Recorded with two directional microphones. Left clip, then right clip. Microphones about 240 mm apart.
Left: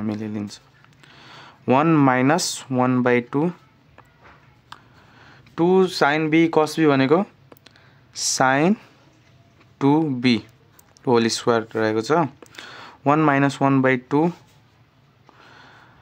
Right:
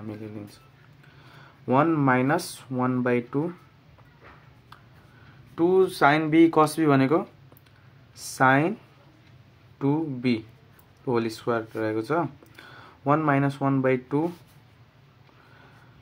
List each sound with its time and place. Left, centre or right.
0.0 s speech: left
5.5 s speech: left
9.8 s speech: left